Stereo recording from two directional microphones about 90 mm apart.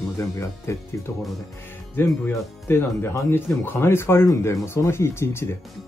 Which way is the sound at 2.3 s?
30° left (ahead or behind).